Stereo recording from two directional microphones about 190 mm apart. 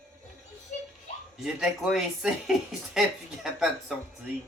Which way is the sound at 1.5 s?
5° right (ahead or behind).